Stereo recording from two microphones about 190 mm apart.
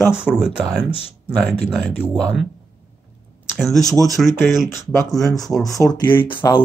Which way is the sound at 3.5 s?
Centre (ahead or behind).